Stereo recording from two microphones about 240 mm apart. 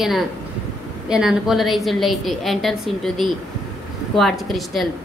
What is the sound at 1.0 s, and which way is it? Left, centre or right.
A woman's voice, centre.